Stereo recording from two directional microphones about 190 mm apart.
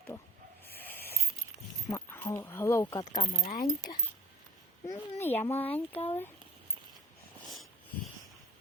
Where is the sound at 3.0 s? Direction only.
35° left (ahead or behind).